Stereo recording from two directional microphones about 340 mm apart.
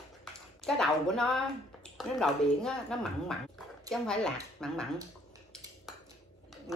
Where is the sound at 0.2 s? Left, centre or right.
Centre.